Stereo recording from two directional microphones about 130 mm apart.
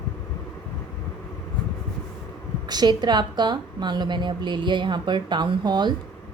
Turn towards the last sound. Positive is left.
turn(degrees=-35)  # may be behind; listen again after turning